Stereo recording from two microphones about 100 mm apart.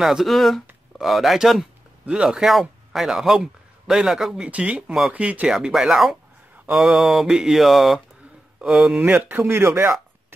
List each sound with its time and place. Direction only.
0.0 s mantra: 5° right (ahead or behind)
0.9 s speech: centre (ahead or behind)
5.5 s mantra: 5° right (ahead or behind)
6.5 s a sound: 15° right (ahead or behind)
6.8 s mantra: 5° right (ahead or behind)
8.5 s speech: 10° right (ahead or behind); by 9.9 s 25° right (ahead or behind)